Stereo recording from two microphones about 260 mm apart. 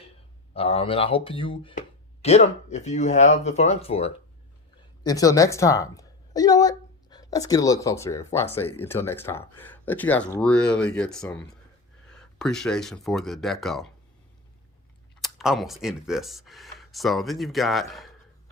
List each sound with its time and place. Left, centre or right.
0.5 s a woman's voice: left; by 13.9 s centre
15.2 s speech: centre